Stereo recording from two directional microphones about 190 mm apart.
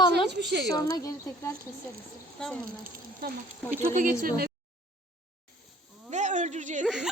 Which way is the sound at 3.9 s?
45° right (ahead or behind).